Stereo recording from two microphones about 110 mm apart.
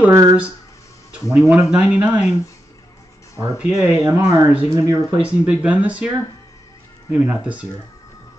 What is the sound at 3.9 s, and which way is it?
Speech, 20° right (ahead or behind).